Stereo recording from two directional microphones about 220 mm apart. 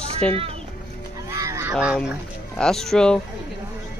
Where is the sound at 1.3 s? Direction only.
15° right (ahead or behind).